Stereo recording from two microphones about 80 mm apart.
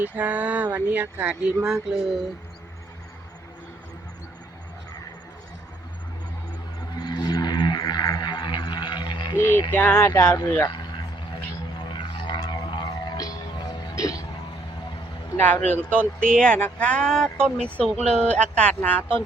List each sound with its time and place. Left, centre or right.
0.0 s speech: right
1.6 s speech: centre
7.0 s a sound: left
9.3 s speech: left
11.8 s a sound: left
13.1 s music: left
13.9 s hiccup: left
15.4 s speech: left